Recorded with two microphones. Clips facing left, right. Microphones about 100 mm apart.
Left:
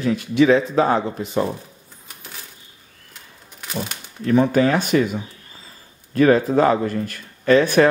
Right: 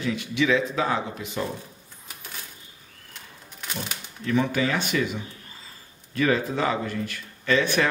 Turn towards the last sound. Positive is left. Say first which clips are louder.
# left 8 dB
turn(degrees=40)  # may be behind; listen again after turning